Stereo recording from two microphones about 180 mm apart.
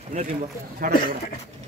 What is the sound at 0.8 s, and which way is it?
Speech, 50° right (ahead or behind).